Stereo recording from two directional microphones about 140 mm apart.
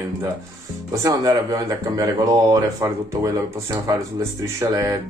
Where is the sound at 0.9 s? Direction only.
25° right (ahead or behind).